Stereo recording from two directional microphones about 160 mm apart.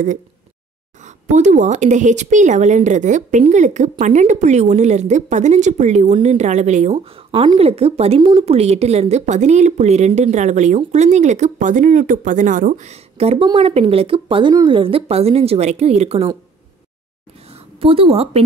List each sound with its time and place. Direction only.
1.0 s speech: 50° right (ahead or behind)
17.7 s speech: 35° right (ahead or behind)